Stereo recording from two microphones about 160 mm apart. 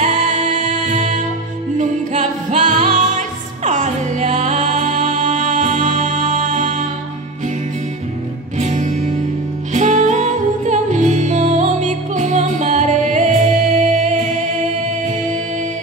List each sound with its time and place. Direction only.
0.0 s music: 50° right (ahead or behind)
8.5 s music: 50° right (ahead or behind)